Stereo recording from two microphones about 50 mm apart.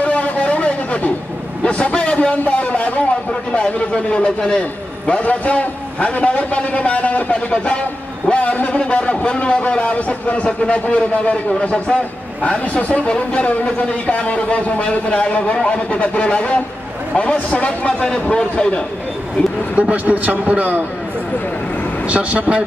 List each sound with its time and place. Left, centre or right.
0.0 s a sound: left
1.6 s a man's voice: left
19.7 s a man's voice: right
22.0 s speech: right